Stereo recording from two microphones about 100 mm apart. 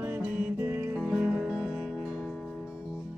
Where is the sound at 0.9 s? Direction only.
Centre (ahead or behind).